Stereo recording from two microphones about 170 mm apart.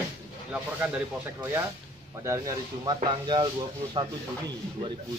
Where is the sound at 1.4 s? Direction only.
15° right (ahead or behind).